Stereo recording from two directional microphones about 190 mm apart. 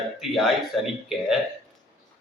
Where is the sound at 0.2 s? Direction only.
Centre (ahead or behind).